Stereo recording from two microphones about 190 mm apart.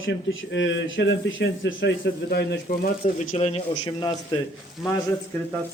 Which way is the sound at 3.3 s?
35° left (ahead or behind).